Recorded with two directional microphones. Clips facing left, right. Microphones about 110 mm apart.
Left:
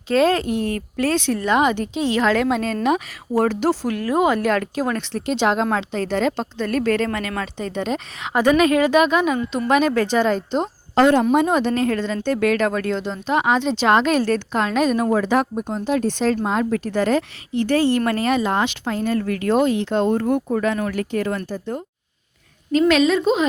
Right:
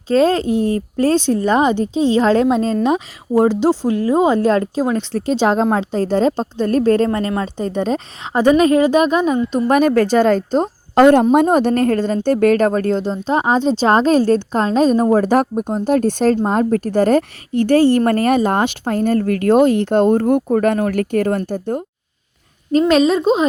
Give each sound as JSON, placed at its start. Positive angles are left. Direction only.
{"t": 0.1, "sound": "a woman's voice", "side_deg": -35}
{"t": 22.9, "sound": "speech", "side_deg": -35}